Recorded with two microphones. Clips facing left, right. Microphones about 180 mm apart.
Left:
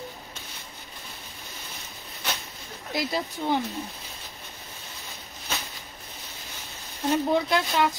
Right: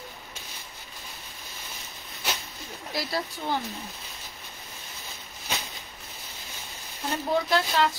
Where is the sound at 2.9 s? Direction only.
20° left (ahead or behind).